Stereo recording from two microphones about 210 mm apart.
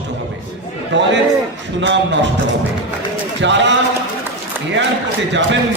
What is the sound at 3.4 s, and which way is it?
Speech, 60° right (ahead or behind).